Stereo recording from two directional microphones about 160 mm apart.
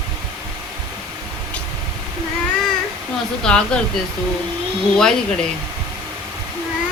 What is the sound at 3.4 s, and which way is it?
Speech, 5° left (ahead or behind).